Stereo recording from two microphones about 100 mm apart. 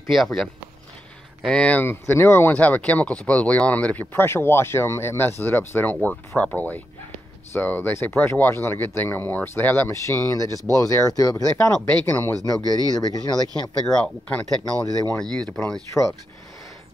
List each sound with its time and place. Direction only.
0.1 s speech: centre (ahead or behind)
1.5 s speech: 10° left (ahead or behind); by 11.7 s 30° left (ahead or behind)
11.8 s speech: 20° left (ahead or behind)
12.6 s speech: 40° right (ahead or behind)
13.8 s speech: 5° left (ahead or behind)
14.9 s speech: 40° right (ahead or behind)
15.3 s speech: 5° left (ahead or behind)